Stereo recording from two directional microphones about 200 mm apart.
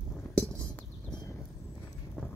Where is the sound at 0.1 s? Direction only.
5° left (ahead or behind).